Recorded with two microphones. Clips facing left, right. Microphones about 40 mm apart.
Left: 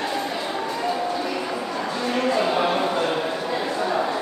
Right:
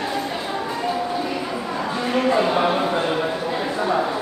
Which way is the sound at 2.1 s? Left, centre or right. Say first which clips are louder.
Right 3 dB; centre.